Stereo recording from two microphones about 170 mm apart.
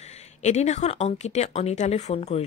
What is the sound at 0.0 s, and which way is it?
A woman's voice, 40° left (ahead or behind).